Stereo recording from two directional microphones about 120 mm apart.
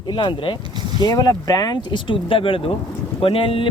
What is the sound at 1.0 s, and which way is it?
Speech, 30° left (ahead or behind).